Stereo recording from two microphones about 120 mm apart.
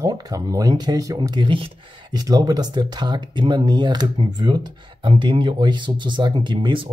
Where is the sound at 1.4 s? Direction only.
45° right (ahead or behind).